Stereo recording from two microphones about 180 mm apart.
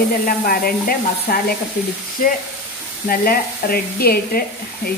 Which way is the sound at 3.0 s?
55° left (ahead or behind).